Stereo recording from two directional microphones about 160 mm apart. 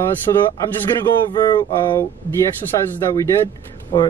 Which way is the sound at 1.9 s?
15° left (ahead or behind).